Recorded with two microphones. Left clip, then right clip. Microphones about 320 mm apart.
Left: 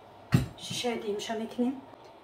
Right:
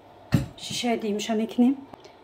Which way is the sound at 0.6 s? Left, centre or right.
Right.